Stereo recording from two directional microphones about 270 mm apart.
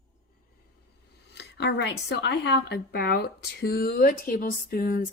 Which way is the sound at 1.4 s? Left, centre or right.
Left.